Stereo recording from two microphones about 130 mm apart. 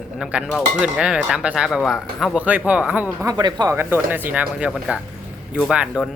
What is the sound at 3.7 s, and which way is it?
Speech, 15° right (ahead or behind).